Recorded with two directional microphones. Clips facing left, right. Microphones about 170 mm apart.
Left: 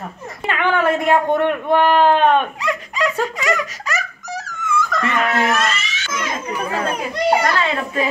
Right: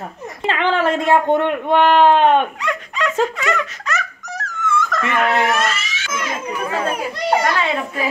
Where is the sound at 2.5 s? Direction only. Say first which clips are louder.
Left 1 dB; 10° left (ahead or behind).